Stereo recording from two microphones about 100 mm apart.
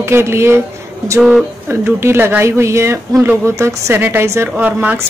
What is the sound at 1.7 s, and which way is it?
Speech, 25° right (ahead or behind).